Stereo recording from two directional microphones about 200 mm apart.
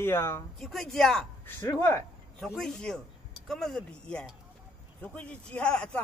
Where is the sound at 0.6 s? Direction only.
Centre (ahead or behind).